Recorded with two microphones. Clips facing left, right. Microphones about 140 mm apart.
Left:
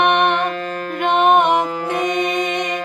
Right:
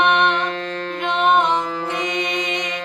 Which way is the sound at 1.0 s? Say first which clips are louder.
Left 4 dB; 55° left (ahead or behind).